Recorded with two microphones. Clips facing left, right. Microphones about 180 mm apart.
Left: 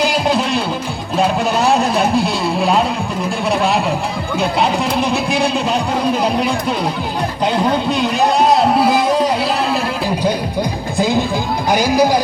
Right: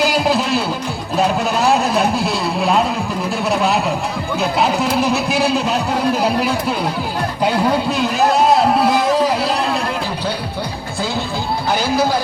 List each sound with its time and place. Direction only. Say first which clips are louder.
0.0 s music: even; 5° right (ahead or behind)
1.1 s vehicle: left 1 dB; 5° right (ahead or behind)
4.4 s speech: left 1 dB; 5° right (ahead or behind)
7.4 s a sound: even; 5° right (ahead or behind)
10.9 s music: left 6 dB; 15° left (ahead or behind)